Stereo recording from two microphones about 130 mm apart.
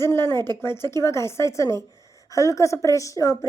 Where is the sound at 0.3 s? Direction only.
30° right (ahead or behind).